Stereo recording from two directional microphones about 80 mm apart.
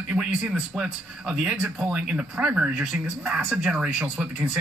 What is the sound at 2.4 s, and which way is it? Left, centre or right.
Speech, right.